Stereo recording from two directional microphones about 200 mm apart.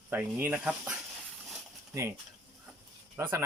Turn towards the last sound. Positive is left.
turn(degrees=-10)  # may be behind; listen again after turning